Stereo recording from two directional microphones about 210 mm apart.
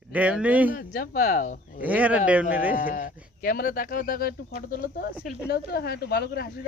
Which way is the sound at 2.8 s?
40° left (ahead or behind).